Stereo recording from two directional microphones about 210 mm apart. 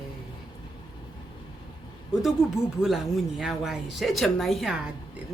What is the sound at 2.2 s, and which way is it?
Speech, centre (ahead or behind).